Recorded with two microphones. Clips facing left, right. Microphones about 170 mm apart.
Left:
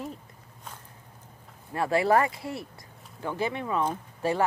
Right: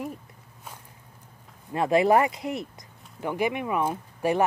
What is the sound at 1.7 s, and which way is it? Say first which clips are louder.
Speech: right 3 dB; 20° right (ahead or behind).